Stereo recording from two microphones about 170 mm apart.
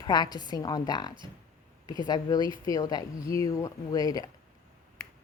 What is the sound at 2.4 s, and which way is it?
Speech, 30° right (ahead or behind).